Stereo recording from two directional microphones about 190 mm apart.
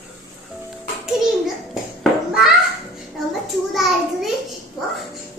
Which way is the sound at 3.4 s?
Centre (ahead or behind).